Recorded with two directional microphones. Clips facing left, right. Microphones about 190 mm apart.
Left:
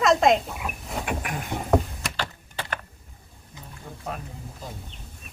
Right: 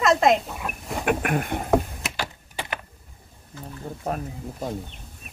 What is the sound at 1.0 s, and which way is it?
Speech, 60° right (ahead or behind).